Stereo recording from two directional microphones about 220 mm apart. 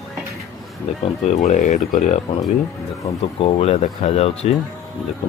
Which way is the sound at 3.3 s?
25° left (ahead or behind).